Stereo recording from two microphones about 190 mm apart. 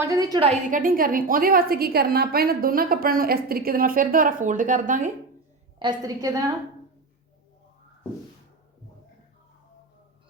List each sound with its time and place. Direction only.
0.0 s a woman's voice: 20° right (ahead or behind)
0.7 s a woman's voice: 45° right (ahead or behind)
5.8 s a woman's voice: 20° right (ahead or behind)